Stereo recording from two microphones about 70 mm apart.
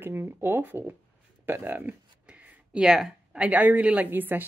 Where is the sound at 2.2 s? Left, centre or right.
Right.